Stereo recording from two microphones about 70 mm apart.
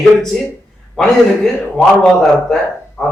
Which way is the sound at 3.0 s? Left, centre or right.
Centre.